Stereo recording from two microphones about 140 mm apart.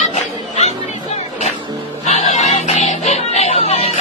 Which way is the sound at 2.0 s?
55° left (ahead or behind).